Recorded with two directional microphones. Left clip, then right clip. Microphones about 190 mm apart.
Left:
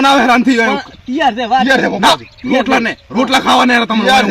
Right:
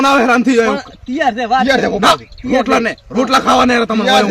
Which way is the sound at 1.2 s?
15° right (ahead or behind).